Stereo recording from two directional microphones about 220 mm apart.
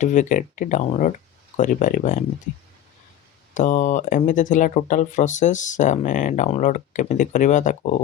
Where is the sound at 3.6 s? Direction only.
35° left (ahead or behind).